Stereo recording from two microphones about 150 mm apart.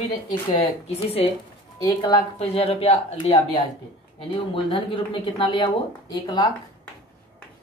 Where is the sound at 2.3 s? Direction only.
45° left (ahead or behind).